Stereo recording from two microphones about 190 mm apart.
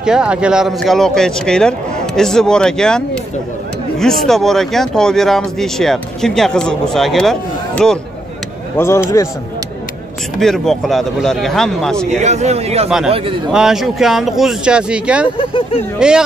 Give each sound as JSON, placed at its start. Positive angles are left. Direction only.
{"t": 0.0, "sound": "speech", "side_deg": -5}
{"t": 4.0, "sound": "speech", "side_deg": 0}
{"t": 8.7, "sound": "a man's voice", "side_deg": 15}
{"t": 10.4, "sound": "speech", "side_deg": 0}
{"t": 12.2, "sound": "a man's voice", "side_deg": -35}
{"t": 13.5, "sound": "speech", "side_deg": -5}
{"t": 15.2, "sound": "speech", "side_deg": 25}
{"t": 16.0, "sound": "speech", "side_deg": -5}